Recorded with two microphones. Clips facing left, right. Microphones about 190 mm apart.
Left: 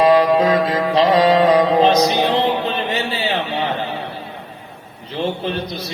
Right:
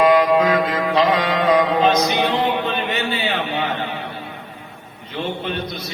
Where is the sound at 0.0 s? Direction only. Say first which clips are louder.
Left 1 dB; 30° left (ahead or behind).